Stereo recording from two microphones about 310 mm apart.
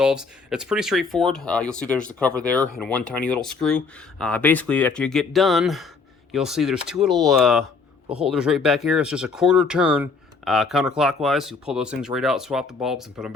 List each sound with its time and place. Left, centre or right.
0.0 s speech: centre
7.6 s a sound: centre
8.2 s speech: centre